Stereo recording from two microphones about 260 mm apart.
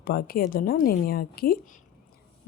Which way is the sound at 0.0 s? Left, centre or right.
Left.